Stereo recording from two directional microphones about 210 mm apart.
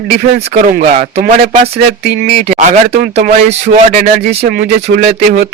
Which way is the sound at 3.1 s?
30° right (ahead or behind).